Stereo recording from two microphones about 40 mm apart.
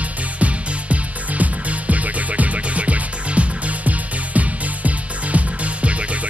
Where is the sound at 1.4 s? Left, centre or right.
Right.